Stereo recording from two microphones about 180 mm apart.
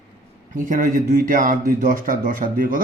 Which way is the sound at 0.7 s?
50° right (ahead or behind).